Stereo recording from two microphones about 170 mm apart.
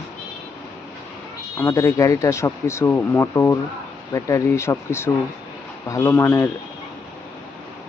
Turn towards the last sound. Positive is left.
turn(degrees=15)  # may be behind; listen again after turning